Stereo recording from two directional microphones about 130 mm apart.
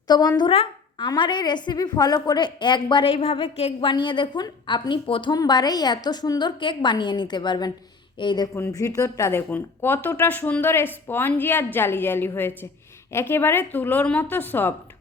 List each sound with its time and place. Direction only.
0.1 s a woman's voice: 30° left (ahead or behind)
0.5 s a sound: 50° left (ahead or behind)
1.0 s a woman's voice: 35° left (ahead or behind)
8.5 s speech: 20° left (ahead or behind)